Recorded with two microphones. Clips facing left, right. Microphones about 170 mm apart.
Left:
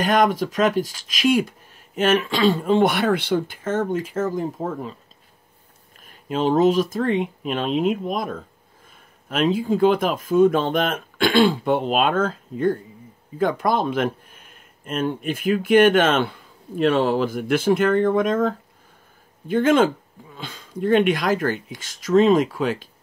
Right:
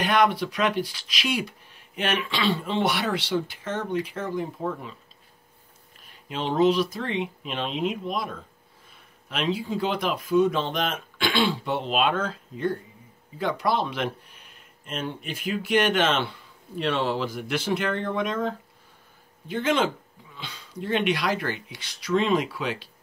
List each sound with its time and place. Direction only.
0.0 s speech: 45° left (ahead or behind)
5.9 s speech: 45° left (ahead or behind)